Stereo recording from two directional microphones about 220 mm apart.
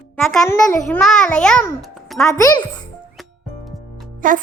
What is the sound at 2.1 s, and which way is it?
Speech, 15° left (ahead or behind).